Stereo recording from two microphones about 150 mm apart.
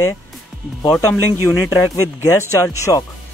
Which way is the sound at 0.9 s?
15° left (ahead or behind).